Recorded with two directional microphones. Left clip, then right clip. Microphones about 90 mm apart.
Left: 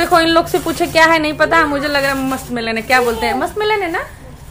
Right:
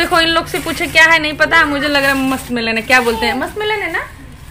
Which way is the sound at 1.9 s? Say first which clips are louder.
Right 2 dB; 15° right (ahead or behind).